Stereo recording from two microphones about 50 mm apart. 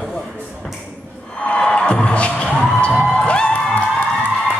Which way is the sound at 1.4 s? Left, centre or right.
Left.